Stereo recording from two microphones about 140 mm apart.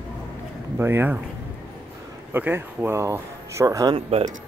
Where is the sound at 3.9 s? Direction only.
45° right (ahead or behind).